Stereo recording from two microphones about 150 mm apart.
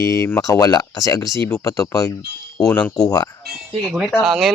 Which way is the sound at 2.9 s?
25° left (ahead or behind).